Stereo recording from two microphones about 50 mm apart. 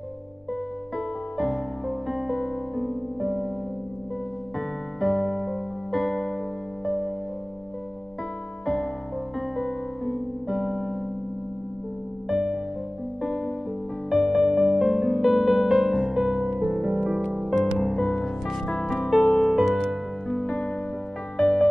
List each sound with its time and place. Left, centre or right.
0.9 s music: centre
4.6 s music: centre
9.6 s music: centre
12.3 s music: centre
17.7 s music: centre
19.5 s music: centre
19.8 s music: centre